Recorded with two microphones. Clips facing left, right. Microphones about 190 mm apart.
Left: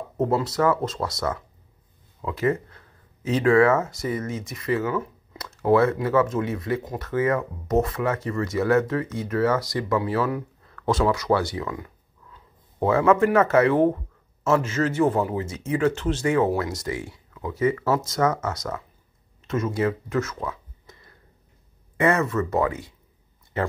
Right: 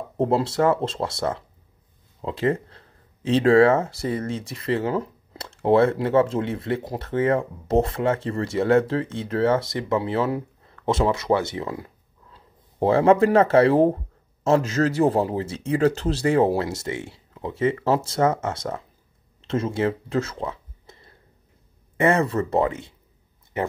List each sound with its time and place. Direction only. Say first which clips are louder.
0.2 s a man's voice: right 2 dB; 30° right (ahead or behind)